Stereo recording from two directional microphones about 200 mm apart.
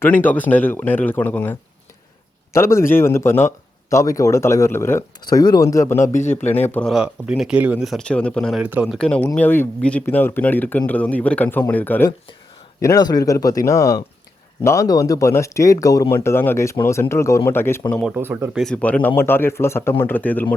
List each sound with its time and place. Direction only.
0.0 s speech: 10° left (ahead or behind)
6.9 s speech: 5° right (ahead or behind); by 17.8 s 10° left (ahead or behind)
18.2 s speech: 10° right (ahead or behind)
18.6 s speech: 5° left (ahead or behind)